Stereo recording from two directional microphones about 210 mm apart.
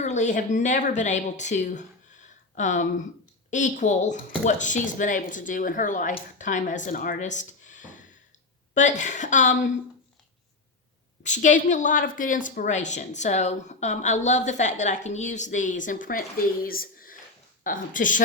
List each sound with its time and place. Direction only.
0.0 s a woman's voice: 35° left (ahead or behind)
11.2 s a woman's voice: 35° left (ahead or behind)
16.6 s a sound: 45° left (ahead or behind)
17.6 s a woman's voice: 40° left (ahead or behind)